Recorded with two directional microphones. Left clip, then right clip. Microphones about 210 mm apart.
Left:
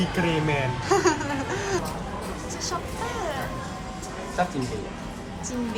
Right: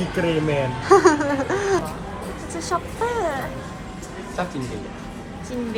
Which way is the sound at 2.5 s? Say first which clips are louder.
Right 7 dB; centre (ahead or behind).